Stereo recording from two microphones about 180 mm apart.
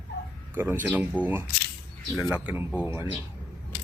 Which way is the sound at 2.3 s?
10° right (ahead or behind).